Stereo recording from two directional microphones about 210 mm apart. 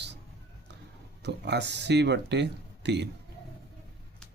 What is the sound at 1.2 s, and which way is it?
Speech, 55° right (ahead or behind).